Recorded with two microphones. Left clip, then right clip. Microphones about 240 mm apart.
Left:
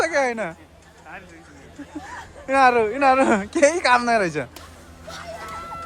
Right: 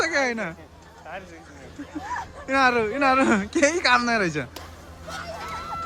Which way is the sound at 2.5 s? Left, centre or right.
Centre.